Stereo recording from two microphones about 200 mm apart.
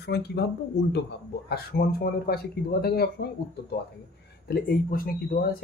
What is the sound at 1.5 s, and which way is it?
Speech, 50° left (ahead or behind).